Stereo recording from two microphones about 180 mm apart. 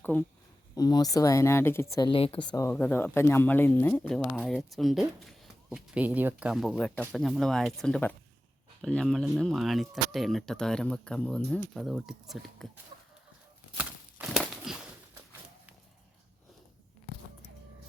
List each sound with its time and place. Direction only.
0.0 s speech: 10° left (ahead or behind)
0.8 s speech: 20° left (ahead or behind); by 12.8 s centre (ahead or behind)
13.7 s a sound: 5° right (ahead or behind)